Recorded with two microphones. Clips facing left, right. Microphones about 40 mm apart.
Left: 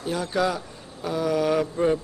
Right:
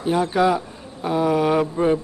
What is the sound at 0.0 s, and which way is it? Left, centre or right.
Speech, right.